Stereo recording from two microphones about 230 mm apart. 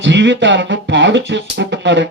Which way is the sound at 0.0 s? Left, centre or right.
Right.